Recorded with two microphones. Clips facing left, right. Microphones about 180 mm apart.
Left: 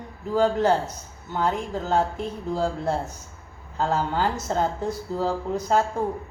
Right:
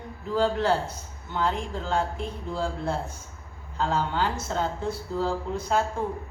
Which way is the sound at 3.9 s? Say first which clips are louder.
Left 2 dB; 45° left (ahead or behind).